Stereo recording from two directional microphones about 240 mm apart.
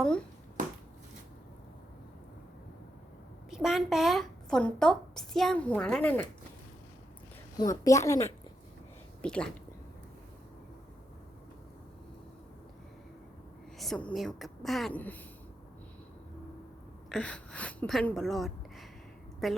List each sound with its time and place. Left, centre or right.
3.5 s a woman's voice: centre
7.5 s a woman's voice: centre
13.7 s a woman's voice: centre
17.1 s a woman's voice: centre